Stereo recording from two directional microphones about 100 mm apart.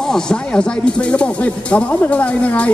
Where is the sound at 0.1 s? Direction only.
10° left (ahead or behind).